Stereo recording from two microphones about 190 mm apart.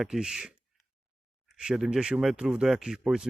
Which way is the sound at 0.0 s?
5° right (ahead or behind).